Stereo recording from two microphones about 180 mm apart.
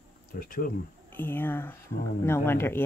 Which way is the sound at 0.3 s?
55° left (ahead or behind).